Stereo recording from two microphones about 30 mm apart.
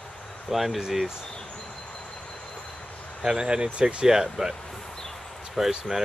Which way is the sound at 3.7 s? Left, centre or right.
Right.